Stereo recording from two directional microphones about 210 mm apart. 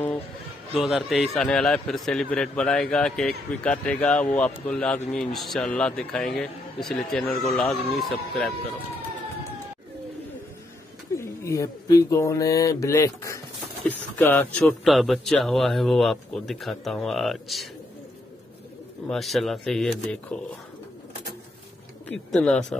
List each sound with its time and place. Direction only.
0.7 s a man's voice: centre (ahead or behind)
11.1 s a man's voice: 15° left (ahead or behind)
19.0 s a man's voice: centre (ahead or behind)
22.0 s speech: 5° left (ahead or behind)